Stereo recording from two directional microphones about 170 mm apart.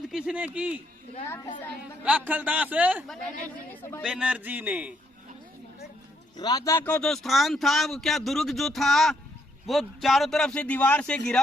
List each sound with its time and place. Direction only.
0.1 s a man's voice: 5° right (ahead or behind)
1.3 s a woman's voice: 20° left (ahead or behind)
2.0 s a man's voice: 10° right (ahead or behind)
4.0 s a man's voice: 5° right (ahead or behind)
6.3 s speech: 25° left (ahead or behind); by 11.2 s 10° left (ahead or behind)